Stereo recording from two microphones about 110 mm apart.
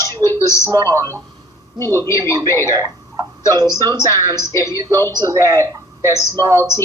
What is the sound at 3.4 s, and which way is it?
Speech, 40° right (ahead or behind).